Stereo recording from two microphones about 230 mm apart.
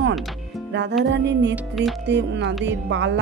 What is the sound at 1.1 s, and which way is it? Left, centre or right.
Speech, right.